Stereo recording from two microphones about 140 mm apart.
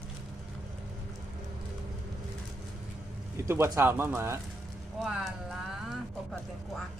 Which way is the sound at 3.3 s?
20° right (ahead or behind).